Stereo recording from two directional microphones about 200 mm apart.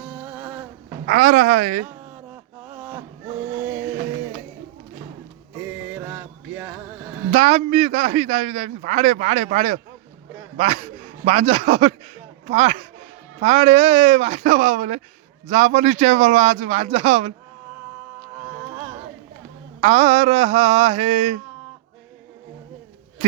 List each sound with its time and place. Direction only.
0.0 s a sound: 5° right (ahead or behind)
1.0 s a woman's voice: 45° right (ahead or behind)
1.9 s a sound: 10° right (ahead or behind)
3.4 s music: 10° right (ahead or behind)
5.5 s music: 10° right (ahead or behind)
7.3 s a man's voice: 35° right (ahead or behind)
18.3 s music: 5° right (ahead or behind)
19.8 s a man's voice: 35° right (ahead or behind)